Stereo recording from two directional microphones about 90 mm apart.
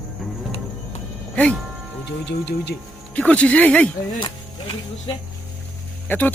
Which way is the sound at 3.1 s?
15° left (ahead or behind).